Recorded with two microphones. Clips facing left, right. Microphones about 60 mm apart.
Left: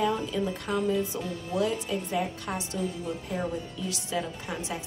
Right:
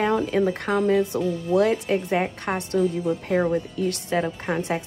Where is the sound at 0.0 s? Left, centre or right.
Right.